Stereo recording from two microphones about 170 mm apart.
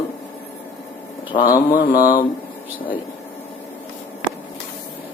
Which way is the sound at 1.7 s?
55° left (ahead or behind).